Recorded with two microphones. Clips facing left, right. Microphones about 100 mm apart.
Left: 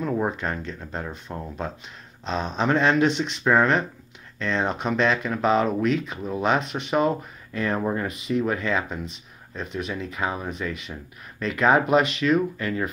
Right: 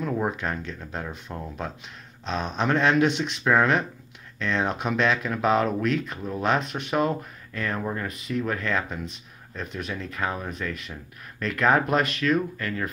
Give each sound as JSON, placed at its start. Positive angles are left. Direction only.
{"t": 0.0, "sound": "speech", "side_deg": 0}
{"t": 7.8, "sound": "speech", "side_deg": 15}
{"t": 8.1, "sound": "speech", "side_deg": 0}